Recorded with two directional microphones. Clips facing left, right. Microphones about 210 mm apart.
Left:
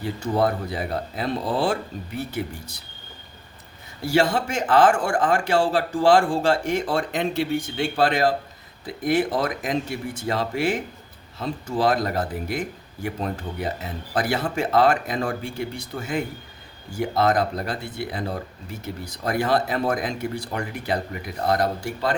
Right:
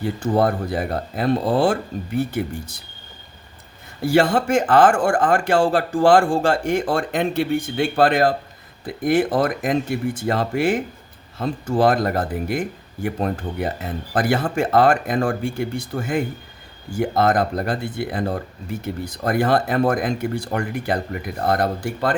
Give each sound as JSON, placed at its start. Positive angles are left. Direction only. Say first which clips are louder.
{"t": 0.0, "sound": "speech", "louder": "right 3 dB", "side_deg": -50}
{"t": 4.0, "sound": "speech", "louder": "right 4 dB", "side_deg": -55}